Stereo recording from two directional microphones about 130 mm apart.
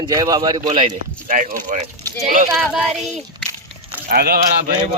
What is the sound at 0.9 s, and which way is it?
Speech, 85° right.